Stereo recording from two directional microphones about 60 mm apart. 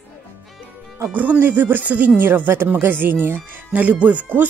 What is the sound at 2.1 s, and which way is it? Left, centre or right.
Speech, right.